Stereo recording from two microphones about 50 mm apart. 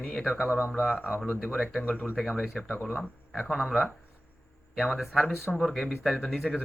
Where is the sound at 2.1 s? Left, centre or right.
Centre.